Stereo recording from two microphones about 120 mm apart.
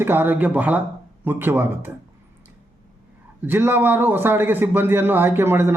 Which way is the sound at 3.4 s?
15° right (ahead or behind).